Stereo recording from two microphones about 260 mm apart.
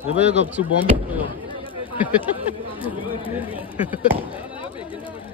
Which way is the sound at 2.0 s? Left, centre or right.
Centre.